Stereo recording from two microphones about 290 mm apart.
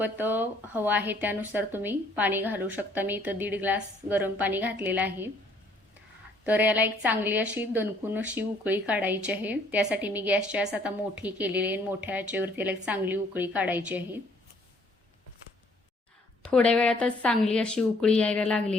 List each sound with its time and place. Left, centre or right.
0.0 s speech: centre
6.4 s a woman's voice: centre
16.4 s a woman's voice: centre